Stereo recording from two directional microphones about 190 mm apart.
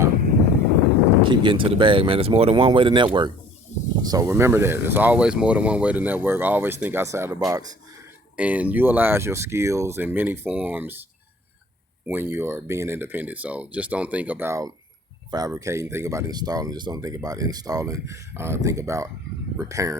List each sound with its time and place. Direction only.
1.2 s speech: 25° right (ahead or behind)
3.7 s a sound: 40° left (ahead or behind)
4.0 s speech: 20° right (ahead or behind)
8.4 s speech: 5° right (ahead or behind)
12.0 s speech: 10° right (ahead or behind)